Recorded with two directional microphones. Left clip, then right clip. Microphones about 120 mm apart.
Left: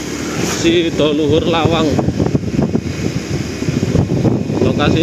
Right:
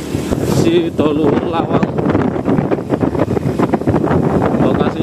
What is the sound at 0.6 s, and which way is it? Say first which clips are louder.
Speech: left 1 dB; 55° right (ahead or behind).